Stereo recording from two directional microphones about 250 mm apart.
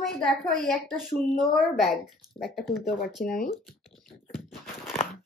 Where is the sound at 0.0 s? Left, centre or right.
Centre.